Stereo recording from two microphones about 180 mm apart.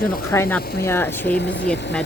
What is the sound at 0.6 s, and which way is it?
Speech, 60° left (ahead or behind).